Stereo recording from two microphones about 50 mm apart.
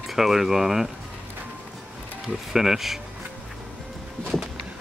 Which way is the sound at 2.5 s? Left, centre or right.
Centre.